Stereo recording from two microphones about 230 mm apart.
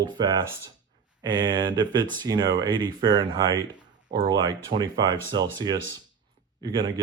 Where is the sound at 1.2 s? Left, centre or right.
Centre.